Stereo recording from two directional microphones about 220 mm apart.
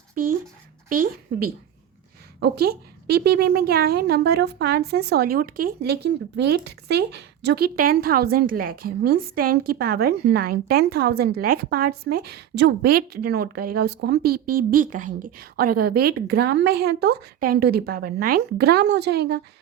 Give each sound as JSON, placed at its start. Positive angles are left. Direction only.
{"t": 0.9, "sound": "a woman's voice", "side_deg": -40}